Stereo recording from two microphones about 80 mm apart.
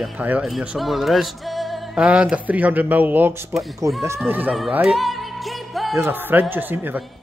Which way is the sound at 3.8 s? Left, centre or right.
Right.